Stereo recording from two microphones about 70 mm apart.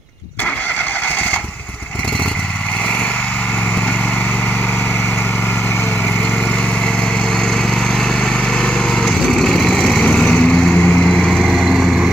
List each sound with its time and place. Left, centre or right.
8.6 s lawn mower: centre
10.0 s lawn mower: centre
11.1 s vehicle: centre